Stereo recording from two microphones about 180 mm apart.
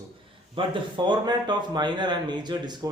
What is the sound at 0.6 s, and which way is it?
Speech, 30° right (ahead or behind).